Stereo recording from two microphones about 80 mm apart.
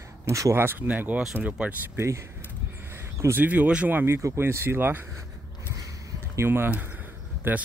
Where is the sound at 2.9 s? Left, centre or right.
Right.